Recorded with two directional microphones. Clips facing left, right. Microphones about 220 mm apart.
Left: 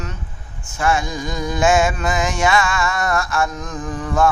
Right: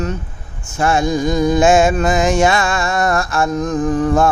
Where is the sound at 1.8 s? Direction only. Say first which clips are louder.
Right 6 dB; 40° right (ahead or behind).